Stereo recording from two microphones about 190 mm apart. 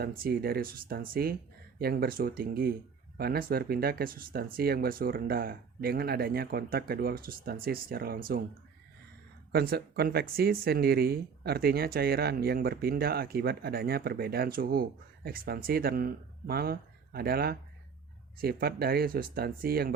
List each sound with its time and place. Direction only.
0.0 s speech: 50° right (ahead or behind)
9.5 s speech: 55° right (ahead or behind)